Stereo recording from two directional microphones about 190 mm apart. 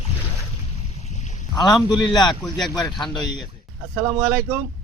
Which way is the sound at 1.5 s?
20° left (ahead or behind).